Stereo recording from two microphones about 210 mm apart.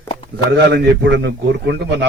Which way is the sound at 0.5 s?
55° right (ahead or behind).